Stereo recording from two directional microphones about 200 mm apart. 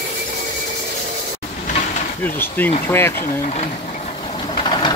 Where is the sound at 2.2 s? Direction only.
10° left (ahead or behind).